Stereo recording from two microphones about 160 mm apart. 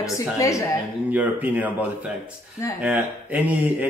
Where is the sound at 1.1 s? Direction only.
10° right (ahead or behind).